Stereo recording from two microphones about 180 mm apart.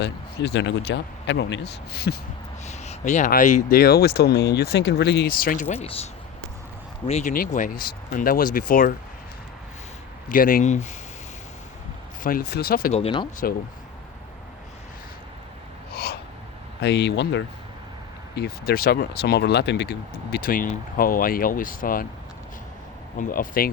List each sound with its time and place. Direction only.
0.0 s speech: 70° left (ahead or behind)
2.6 s speech: 40° left (ahead or behind)
7.1 s speech: 40° left (ahead or behind)
10.2 s speech: 50° left (ahead or behind)
12.2 s speech: 55° left (ahead or behind)
12.9 s speech: 30° left (ahead or behind)
15.9 s snort: 60° left (ahead or behind)
16.8 s speech: 70° left (ahead or behind)
18.3 s speech: 60° left (ahead or behind)
23.1 s speech: 45° left (ahead or behind)